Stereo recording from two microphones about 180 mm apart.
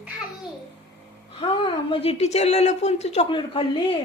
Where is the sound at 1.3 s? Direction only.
30° left (ahead or behind).